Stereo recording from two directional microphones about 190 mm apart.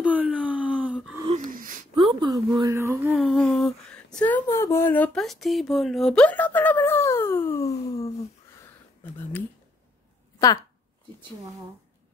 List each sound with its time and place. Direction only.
0.0 s wail: 5° right (ahead or behind)
1.4 s wheeze: 45° right (ahead or behind)
2.0 s a woman's voice: 20° right (ahead or behind)
3.2 s a sound: centre (ahead or behind); by 8.1 s 15° left (ahead or behind)